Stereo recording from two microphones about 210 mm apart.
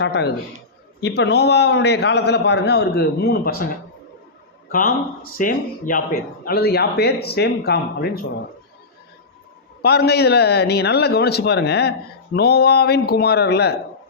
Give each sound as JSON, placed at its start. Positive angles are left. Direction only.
{"t": 0.0, "sound": "a man's voice", "side_deg": 55}
{"t": 4.7, "sound": "a man's voice", "side_deg": 40}
{"t": 9.8, "sound": "a man's voice", "side_deg": 50}